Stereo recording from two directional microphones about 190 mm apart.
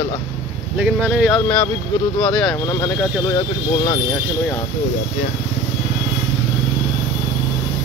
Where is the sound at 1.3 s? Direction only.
10° left (ahead or behind).